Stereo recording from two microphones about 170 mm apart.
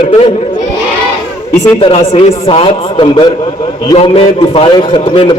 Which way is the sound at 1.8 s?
35° left (ahead or behind).